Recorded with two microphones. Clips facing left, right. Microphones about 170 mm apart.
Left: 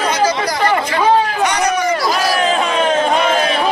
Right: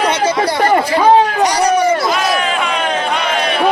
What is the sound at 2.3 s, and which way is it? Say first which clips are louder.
Crowd: left 1 dB; 35° left (ahead or behind).